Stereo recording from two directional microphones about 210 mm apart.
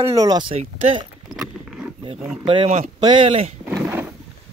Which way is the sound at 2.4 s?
30° right (ahead or behind).